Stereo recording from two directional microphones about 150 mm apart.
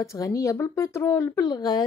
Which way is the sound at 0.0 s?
20° left (ahead or behind).